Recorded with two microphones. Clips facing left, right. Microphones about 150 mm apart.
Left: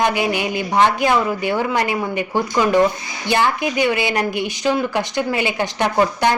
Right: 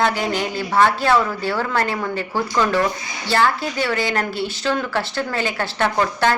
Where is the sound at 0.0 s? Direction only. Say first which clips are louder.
Left 2 dB; 15° left (ahead or behind).